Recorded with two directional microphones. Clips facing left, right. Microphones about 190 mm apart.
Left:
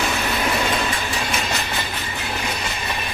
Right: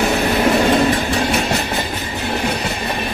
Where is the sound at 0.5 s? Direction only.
40° right (ahead or behind).